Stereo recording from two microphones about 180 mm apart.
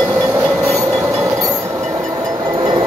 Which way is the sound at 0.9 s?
15° right (ahead or behind).